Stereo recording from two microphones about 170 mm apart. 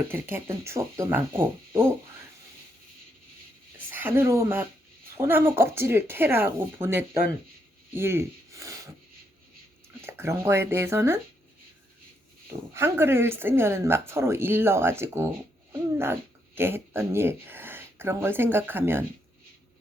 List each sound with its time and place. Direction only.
0.1 s speech: 15° right (ahead or behind)
3.9 s speech: 10° right (ahead or behind)
10.1 s speech: 15° right (ahead or behind)
12.7 s speech: 15° right (ahead or behind)
16.6 s speech: 15° right (ahead or behind)